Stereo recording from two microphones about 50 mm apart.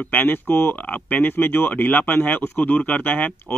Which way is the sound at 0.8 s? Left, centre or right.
Left.